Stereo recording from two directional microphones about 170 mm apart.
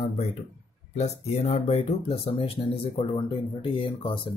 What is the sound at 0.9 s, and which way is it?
Speech, 40° left (ahead or behind).